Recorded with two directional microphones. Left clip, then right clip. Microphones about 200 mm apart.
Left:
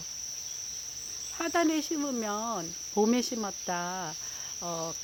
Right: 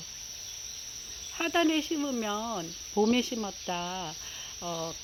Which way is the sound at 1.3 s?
5° right (ahead or behind).